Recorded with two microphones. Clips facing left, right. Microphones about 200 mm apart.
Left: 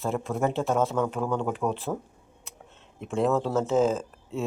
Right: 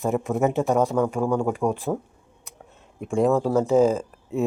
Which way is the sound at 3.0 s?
10° right (ahead or behind).